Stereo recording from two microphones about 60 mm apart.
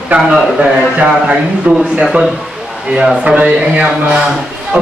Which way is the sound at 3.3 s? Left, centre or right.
Right.